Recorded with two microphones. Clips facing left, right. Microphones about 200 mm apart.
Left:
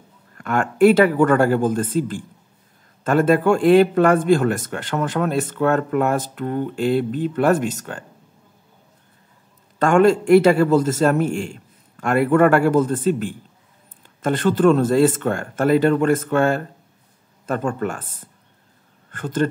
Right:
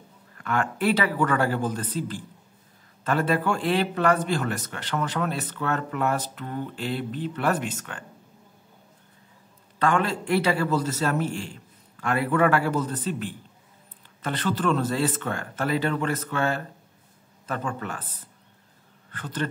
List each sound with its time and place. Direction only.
0.4 s a man's voice: 45° left (ahead or behind)
9.8 s a man's voice: 45° left (ahead or behind)